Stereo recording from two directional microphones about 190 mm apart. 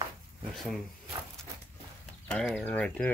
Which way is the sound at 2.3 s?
5° left (ahead or behind).